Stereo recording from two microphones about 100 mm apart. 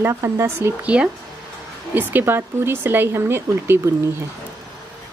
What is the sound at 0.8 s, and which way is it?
Speech, 10° right (ahead or behind).